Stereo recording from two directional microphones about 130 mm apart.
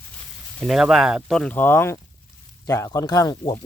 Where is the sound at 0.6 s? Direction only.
5° right (ahead or behind).